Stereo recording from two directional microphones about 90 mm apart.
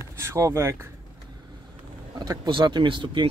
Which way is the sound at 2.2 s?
55° right (ahead or behind).